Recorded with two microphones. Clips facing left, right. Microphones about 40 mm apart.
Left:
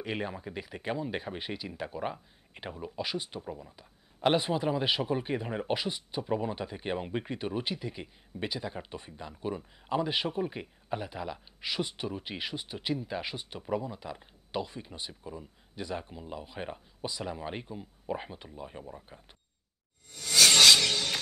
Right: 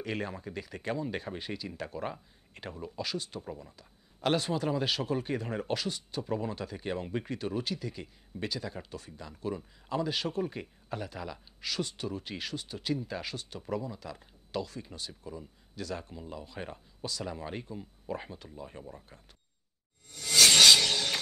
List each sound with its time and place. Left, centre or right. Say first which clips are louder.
0.0 s speech: left 1 dB; centre
3.4 s speech: left 1 dB; centre
3.7 s speech: left 2 dB; left